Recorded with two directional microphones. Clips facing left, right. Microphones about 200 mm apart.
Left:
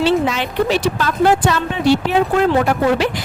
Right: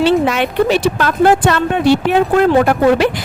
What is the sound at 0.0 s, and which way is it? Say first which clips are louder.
A woman's voice: right 3 dB; 55° right (ahead or behind).